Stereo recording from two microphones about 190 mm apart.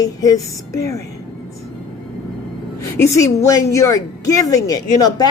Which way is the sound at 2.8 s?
15° left (ahead or behind).